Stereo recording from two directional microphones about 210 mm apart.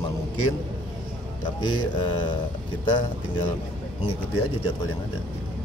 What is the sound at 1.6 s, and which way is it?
Speech, 20° left (ahead or behind).